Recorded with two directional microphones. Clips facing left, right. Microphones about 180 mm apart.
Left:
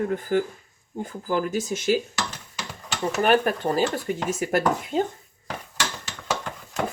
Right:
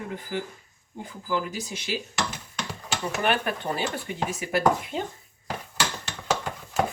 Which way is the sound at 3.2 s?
40° left (ahead or behind).